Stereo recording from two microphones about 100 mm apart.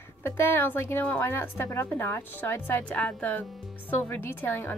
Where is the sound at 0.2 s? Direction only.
25° left (ahead or behind).